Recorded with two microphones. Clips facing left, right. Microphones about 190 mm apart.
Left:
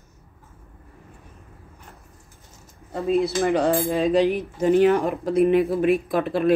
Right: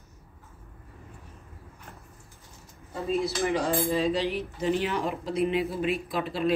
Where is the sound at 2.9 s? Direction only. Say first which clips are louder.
Left 7 dB; 55° left (ahead or behind).